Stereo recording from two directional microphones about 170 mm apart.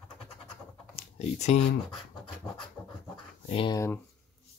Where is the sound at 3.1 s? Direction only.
30° left (ahead or behind).